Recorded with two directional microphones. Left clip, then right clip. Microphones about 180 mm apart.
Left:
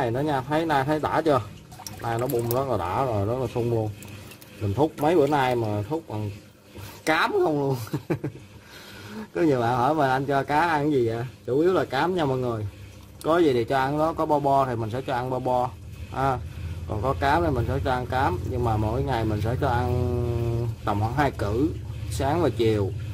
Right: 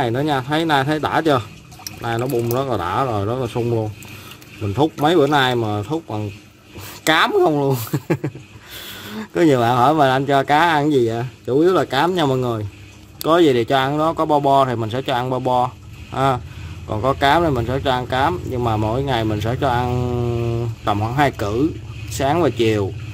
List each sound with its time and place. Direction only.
0.0 s speech: 20° right (ahead or behind)
2.5 s speech: 20° right (ahead or behind)
5.0 s speech: 15° right (ahead or behind)
9.3 s speech: 15° right (ahead or behind)